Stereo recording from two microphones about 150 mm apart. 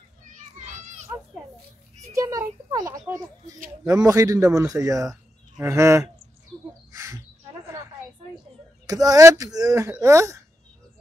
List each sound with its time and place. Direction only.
0.3 s children playing: 55° right (ahead or behind)
2.1 s a sound: 20° right (ahead or behind)
3.8 s speech: 25° right (ahead or behind)
6.9 s bird: 20° right (ahead or behind)
8.8 s speech: 25° right (ahead or behind)